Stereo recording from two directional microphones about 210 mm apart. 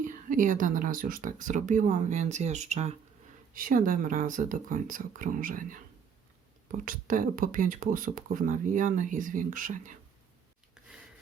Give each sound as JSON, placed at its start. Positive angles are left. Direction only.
{"t": 0.0, "sound": "speech", "side_deg": -40}
{"t": 10.8, "sound": "rub", "side_deg": -5}